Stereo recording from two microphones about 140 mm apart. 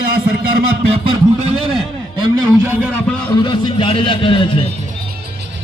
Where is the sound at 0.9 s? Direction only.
45° right (ahead or behind).